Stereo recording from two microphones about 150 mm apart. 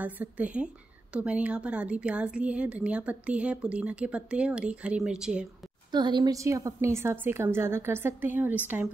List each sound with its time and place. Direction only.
0.0 s a woman's voice: 10° right (ahead or behind)
5.9 s a woman's voice: 30° right (ahead or behind); by 8.5 s 15° right (ahead or behind)